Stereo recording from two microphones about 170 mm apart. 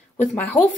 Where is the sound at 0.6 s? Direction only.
50° left (ahead or behind).